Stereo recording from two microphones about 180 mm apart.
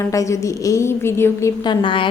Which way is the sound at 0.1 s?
15° left (ahead or behind).